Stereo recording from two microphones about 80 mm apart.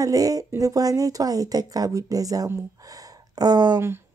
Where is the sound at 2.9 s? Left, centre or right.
Right.